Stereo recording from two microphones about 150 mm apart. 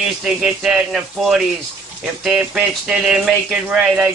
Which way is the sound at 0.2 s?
5° right (ahead or behind).